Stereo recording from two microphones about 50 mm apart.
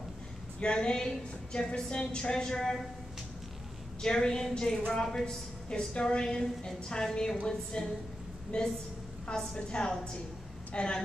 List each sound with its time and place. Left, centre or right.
0.6 s a woman's voice: centre
4.0 s a woman's voice: centre